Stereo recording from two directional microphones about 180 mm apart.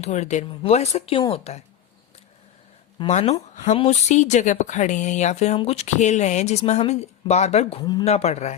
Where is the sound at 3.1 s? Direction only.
40° left (ahead or behind).